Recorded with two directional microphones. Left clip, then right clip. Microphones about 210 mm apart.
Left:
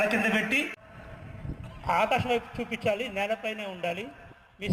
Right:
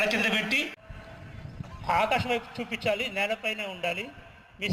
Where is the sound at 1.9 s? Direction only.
30° left (ahead or behind).